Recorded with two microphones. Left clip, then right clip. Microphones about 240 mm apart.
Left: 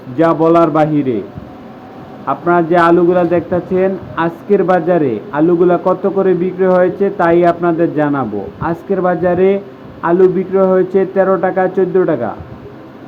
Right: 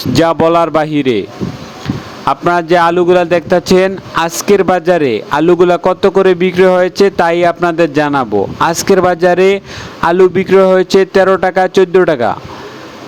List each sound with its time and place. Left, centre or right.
0.2 s a man's voice: right
2.2 s a man's voice: right